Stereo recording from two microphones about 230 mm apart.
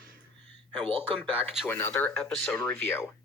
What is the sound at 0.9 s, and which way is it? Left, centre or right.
Speech, right.